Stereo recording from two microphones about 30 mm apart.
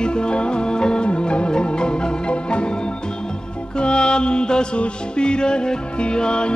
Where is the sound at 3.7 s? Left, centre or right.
Left.